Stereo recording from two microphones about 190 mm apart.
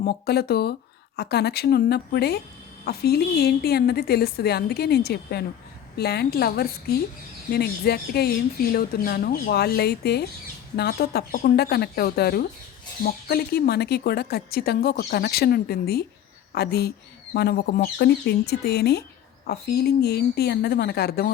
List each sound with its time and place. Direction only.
0.0 s speech: 55° left (ahead or behind)